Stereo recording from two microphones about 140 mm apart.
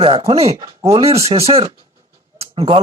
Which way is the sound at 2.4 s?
40° right (ahead or behind).